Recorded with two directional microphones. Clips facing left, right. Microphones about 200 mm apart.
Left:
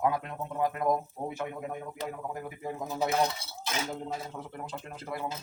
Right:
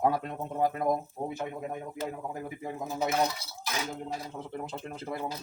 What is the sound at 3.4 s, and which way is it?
Speech, 25° left (ahead or behind).